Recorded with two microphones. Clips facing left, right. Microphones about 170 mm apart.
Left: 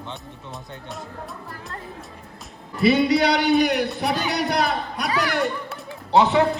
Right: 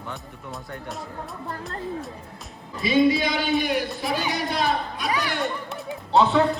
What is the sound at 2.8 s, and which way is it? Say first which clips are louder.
A man's voice: left 2 dB; 70° left (ahead or behind).